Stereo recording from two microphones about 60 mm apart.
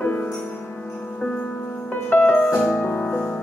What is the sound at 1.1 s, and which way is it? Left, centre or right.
Music, centre.